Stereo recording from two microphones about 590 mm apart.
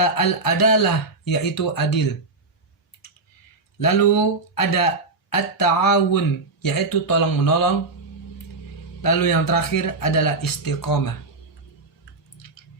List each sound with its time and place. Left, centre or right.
0.0 s speech: left
3.8 s speech: left
9.0 s speech: left